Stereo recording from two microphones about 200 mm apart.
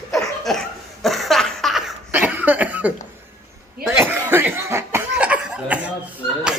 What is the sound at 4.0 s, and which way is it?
Cough, 10° right (ahead or behind).